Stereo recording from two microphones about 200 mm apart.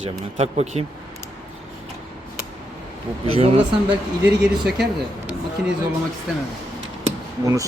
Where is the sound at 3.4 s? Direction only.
25° right (ahead or behind).